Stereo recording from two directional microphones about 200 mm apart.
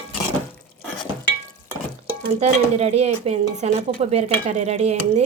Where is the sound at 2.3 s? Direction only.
30° right (ahead or behind).